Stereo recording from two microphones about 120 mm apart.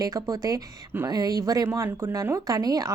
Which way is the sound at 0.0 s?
30° right (ahead or behind).